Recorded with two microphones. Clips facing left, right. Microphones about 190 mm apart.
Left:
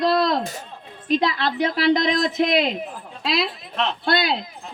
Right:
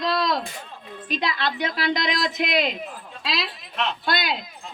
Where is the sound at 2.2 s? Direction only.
25° left (ahead or behind).